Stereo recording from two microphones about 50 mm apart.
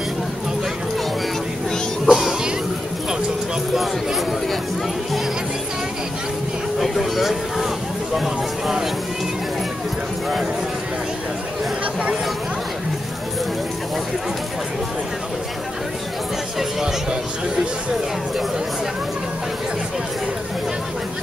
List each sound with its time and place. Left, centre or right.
2.0 s music: centre
3.7 s a sound: centre
6.8 s speech: centre
16.8 s speech: centre